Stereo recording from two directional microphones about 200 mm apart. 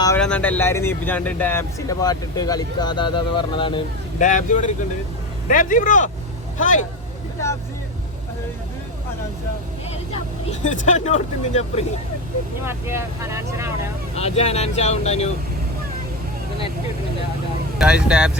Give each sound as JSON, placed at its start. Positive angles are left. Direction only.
{"t": 0.2, "sound": "speech", "side_deg": 5}
{"t": 4.2, "sound": "speech", "side_deg": 40}
{"t": 10.6, "sound": "speech", "side_deg": 35}
{"t": 12.6, "sound": "speech", "side_deg": -15}
{"t": 14.2, "sound": "speech", "side_deg": 30}
{"t": 17.7, "sound": "speech", "side_deg": -5}